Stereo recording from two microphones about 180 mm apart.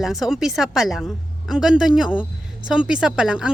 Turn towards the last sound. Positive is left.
turn(degrees=-5)  # may be behind; listen again after turning